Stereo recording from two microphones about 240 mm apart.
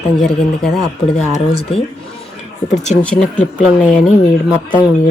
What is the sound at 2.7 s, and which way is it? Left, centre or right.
Speech, left.